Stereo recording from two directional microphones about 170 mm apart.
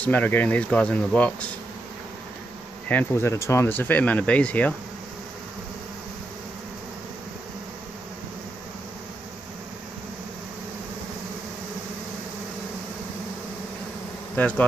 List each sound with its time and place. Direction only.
0.0 s speech: 10° left (ahead or behind)
2.9 s speech: 10° left (ahead or behind)
14.3 s bee: 10° left (ahead or behind)